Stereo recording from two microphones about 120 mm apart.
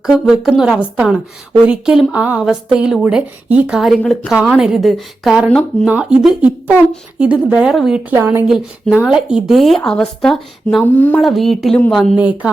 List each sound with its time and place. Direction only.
0.0 s speech: 5° right (ahead or behind)
4.0 s a woman's voice: 10° left (ahead or behind)
4.3 s speech: 5° right (ahead or behind)
8.1 s speech: 20° right (ahead or behind)
8.4 s speech: 5° right (ahead or behind)
10.9 s a woman's voice: 15° left (ahead or behind)
11.2 s speech: centre (ahead or behind)
12.1 s speech: 10° right (ahead or behind)